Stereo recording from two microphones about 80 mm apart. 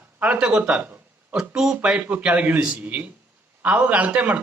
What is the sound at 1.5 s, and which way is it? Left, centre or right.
A man's voice, centre.